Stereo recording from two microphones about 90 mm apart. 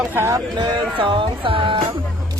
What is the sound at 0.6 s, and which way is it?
Speech, 70° right (ahead or behind).